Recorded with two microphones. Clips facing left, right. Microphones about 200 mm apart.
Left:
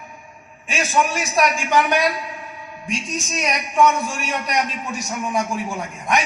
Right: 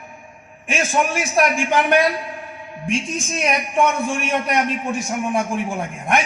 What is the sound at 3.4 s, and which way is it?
A man's voice, 55° right (ahead or behind).